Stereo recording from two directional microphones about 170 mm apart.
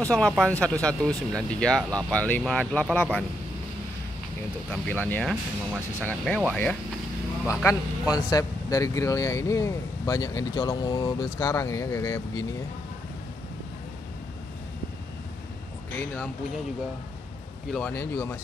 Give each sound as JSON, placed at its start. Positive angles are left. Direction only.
{"t": 0.0, "sound": "speech", "side_deg": 5}
{"t": 4.6, "sound": "speech", "side_deg": 10}
{"t": 5.3, "sound": "speech", "side_deg": -10}
{"t": 6.0, "sound": "speech", "side_deg": 5}
{"t": 8.1, "sound": "speech", "side_deg": 20}
{"t": 17.7, "sound": "speech", "side_deg": 10}